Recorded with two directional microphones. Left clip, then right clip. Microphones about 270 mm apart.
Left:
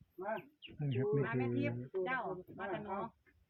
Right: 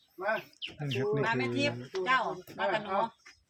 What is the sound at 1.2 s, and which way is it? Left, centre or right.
Speech, right.